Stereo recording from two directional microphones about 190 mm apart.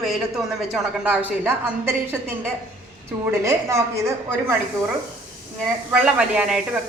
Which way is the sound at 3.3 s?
15° right (ahead or behind).